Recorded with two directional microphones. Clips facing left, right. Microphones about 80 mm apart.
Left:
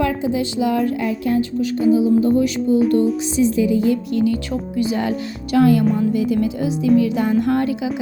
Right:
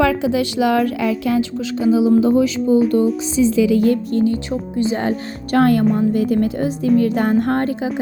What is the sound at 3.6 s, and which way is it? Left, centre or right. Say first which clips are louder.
Music: right 3 dB; right.